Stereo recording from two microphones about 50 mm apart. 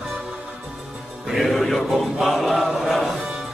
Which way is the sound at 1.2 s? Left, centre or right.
Centre.